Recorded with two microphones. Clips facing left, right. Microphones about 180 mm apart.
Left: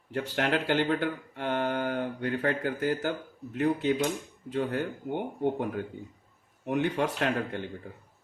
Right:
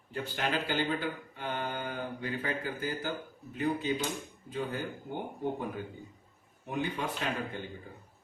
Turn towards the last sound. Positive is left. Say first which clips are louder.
# left 6 dB
turn(degrees=65)  # may be behind; listen again after turning